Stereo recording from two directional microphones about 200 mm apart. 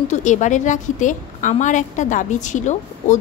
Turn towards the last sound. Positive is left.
turn(degrees=35)  # may be behind; listen again after turning